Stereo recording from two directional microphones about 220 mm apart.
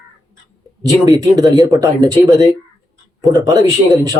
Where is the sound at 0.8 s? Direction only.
15° right (ahead or behind).